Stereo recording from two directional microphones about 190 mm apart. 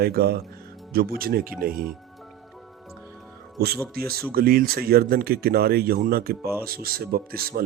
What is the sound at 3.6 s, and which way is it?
Speech, 55° right (ahead or behind).